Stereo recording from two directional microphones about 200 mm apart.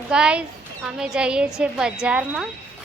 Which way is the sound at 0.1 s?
5° right (ahead or behind).